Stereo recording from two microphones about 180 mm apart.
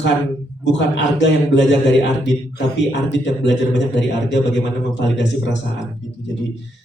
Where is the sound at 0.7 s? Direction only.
85° left.